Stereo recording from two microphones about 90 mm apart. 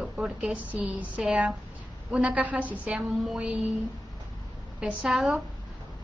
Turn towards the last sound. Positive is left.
turn(degrees=-5)  # may be behind; listen again after turning